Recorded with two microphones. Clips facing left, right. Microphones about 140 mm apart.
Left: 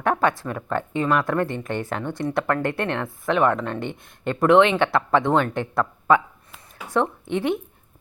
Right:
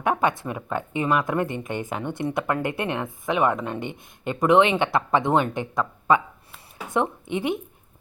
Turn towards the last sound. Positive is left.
turn(degrees=-5)  # may be behind; listen again after turning